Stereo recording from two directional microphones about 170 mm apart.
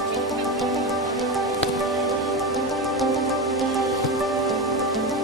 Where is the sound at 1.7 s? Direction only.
Centre (ahead or behind).